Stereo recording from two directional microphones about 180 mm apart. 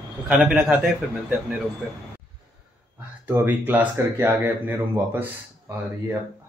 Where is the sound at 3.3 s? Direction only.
10° right (ahead or behind).